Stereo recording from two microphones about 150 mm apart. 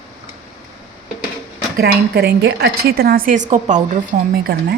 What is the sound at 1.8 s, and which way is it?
A woman's voice, 90° right.